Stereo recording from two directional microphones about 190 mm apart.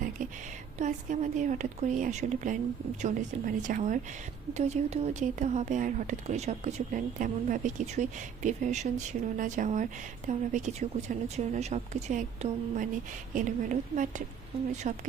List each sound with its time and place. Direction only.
0.8 s speech: 40° right (ahead or behind)